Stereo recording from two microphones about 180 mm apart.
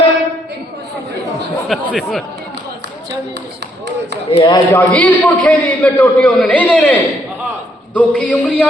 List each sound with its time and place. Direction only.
1.6 s speech: centre (ahead or behind)
4.3 s speech: 25° left (ahead or behind)
4.7 s a man's voice: 10° left (ahead or behind)